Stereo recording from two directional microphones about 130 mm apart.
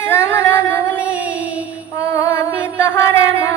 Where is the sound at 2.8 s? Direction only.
25° left (ahead or behind).